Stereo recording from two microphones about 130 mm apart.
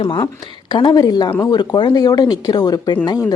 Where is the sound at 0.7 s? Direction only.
35° left (ahead or behind).